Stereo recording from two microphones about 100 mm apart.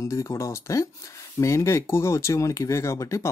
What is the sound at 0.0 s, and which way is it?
Speech, 30° left (ahead or behind).